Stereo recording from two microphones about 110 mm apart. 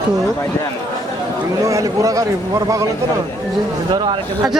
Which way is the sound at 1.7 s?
30° right (ahead or behind).